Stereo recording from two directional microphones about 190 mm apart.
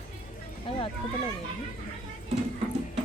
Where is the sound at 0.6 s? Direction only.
25° left (ahead or behind).